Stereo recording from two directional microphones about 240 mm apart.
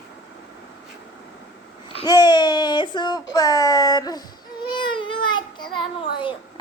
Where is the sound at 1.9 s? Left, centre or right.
Left.